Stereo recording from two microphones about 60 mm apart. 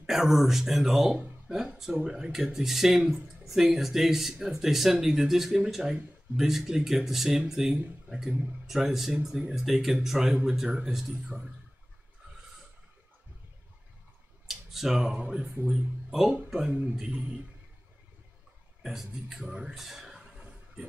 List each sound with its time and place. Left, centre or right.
0.0 s speech: centre
14.5 s speech: centre; by 15.8 s right
16.1 s speech: centre
18.8 s speech: centre
19.7 s a sound: centre